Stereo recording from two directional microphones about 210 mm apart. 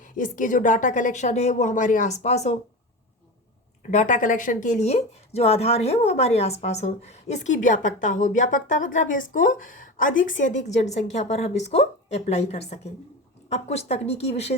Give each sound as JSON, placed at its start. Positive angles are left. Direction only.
{"t": 0.0, "sound": "speech", "side_deg": 40}
{"t": 3.9, "sound": "speech", "side_deg": 35}